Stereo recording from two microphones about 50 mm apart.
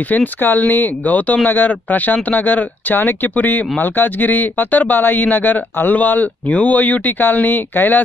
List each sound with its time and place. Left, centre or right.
0.1 s speech: left